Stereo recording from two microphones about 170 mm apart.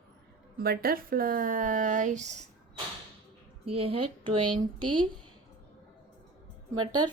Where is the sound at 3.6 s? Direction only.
35° right (ahead or behind).